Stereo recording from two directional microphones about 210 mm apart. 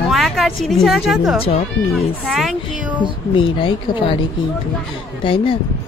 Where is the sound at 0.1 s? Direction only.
Centre (ahead or behind).